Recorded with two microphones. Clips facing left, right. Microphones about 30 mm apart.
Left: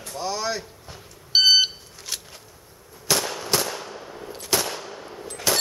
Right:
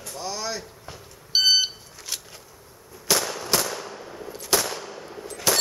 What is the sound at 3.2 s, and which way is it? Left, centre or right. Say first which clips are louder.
Machine gun: even; centre.